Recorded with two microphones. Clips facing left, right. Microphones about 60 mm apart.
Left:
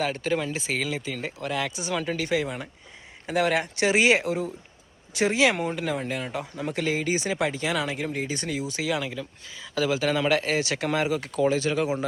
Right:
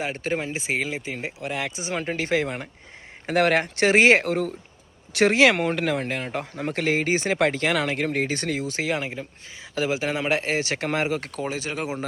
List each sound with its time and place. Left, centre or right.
0.0 s speech: right
11.4 s speech: right